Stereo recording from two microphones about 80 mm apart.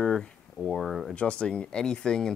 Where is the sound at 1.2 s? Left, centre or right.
Centre.